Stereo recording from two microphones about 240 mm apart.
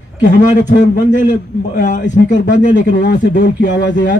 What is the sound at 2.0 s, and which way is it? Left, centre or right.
Speech, left.